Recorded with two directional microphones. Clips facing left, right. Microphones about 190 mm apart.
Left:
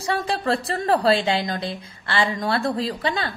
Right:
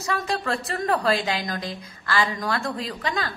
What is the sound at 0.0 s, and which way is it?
A woman's voice, 30° left (ahead or behind).